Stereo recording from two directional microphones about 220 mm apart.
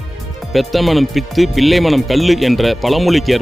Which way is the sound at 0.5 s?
Centre (ahead or behind).